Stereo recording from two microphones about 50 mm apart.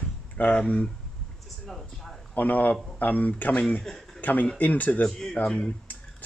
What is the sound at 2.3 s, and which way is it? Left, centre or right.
Speech, left.